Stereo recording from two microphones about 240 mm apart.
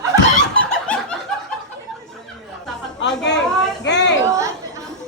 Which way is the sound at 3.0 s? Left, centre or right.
Left.